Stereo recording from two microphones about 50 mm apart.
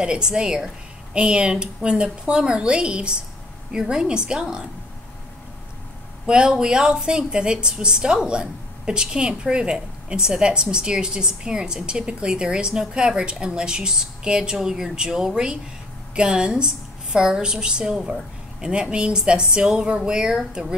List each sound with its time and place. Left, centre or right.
0.0 s a woman's voice: centre
6.2 s a woman's voice: centre